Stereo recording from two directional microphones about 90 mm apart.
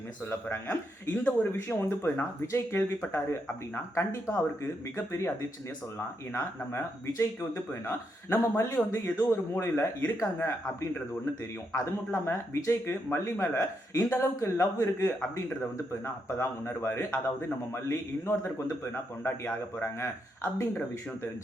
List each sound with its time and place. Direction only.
0.3 s speech: 25° left (ahead or behind)
6.3 s speech: 30° left (ahead or behind)
15.2 s speech: 15° left (ahead or behind)